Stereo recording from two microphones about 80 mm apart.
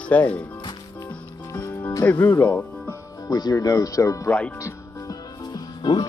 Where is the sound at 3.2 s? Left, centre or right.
Left.